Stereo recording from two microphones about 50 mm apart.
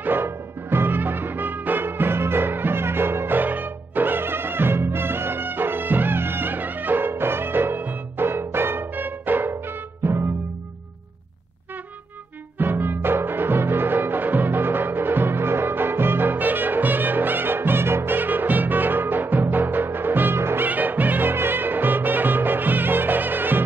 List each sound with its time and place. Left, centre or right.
0.0 s music: right
9.5 s music: right
12.5 s music: right
20.6 s music: right